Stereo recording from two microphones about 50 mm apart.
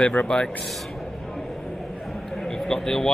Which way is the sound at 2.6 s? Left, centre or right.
Centre.